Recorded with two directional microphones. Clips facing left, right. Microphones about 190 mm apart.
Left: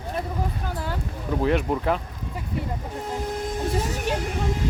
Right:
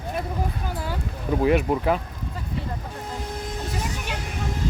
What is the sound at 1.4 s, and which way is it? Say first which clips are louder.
Speech: right 2 dB; 10° right (ahead or behind).